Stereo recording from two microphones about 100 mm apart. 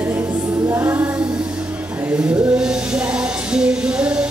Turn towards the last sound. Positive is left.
turn(degrees=-10)  # may be behind; listen again after turning